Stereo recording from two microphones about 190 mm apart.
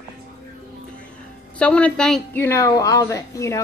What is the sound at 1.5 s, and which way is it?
A woman's voice, 5° left (ahead or behind).